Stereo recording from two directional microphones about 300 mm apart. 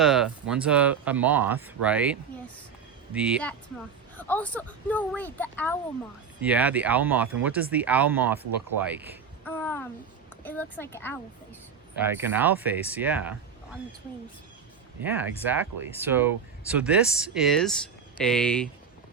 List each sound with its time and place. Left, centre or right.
0.0 s speech: centre
6.4 s speech: centre
9.4 s speech: centre
11.9 s speech: centre
15.0 s speech: centre